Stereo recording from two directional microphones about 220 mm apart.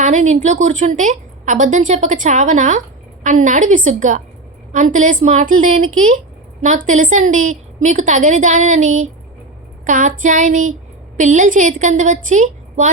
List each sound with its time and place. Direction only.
0.0 s a woman's voice: 35° right (ahead or behind)